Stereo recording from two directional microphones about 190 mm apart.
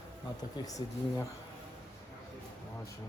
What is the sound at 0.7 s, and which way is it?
Speech, 20° left (ahead or behind).